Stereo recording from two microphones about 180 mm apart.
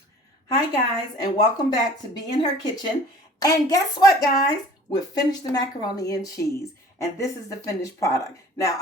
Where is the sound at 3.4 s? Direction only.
20° left (ahead or behind).